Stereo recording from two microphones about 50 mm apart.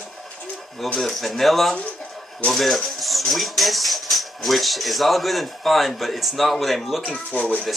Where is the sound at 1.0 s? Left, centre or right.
Centre.